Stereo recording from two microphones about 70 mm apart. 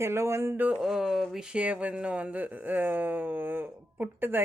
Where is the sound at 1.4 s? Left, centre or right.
Centre.